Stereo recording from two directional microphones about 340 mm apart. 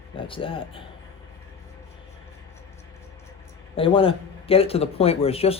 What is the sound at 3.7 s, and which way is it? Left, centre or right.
Speech, centre.